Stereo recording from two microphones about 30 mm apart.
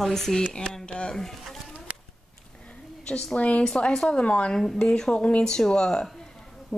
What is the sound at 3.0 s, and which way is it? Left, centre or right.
A woman's voice, left.